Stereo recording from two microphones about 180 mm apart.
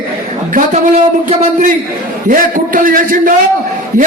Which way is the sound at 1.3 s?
40° right (ahead or behind).